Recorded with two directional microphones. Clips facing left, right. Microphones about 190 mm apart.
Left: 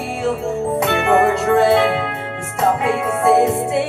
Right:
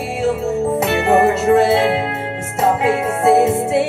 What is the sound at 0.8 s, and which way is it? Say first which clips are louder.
Music: right 1 dB; 25° right (ahead or behind).